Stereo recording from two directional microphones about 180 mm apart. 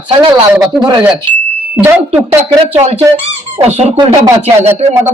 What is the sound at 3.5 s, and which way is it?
Speech, 35° right (ahead or behind).